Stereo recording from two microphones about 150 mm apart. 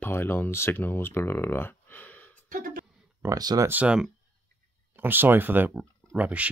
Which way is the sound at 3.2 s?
25° right (ahead or behind).